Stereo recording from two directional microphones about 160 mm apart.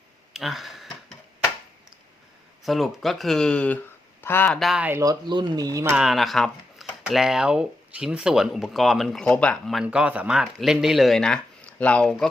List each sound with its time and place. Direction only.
0.3 s speech: centre (ahead or behind)
2.6 s speech: centre (ahead or behind)
4.6 s speech: 5° right (ahead or behind); by 5.9 s 20° right (ahead or behind)
5.9 s speech: 5° right (ahead or behind)